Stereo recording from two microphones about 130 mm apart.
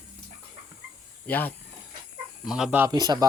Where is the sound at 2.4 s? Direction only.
5° right (ahead or behind).